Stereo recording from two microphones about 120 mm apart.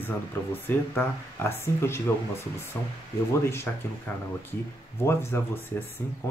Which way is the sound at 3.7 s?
15° left (ahead or behind).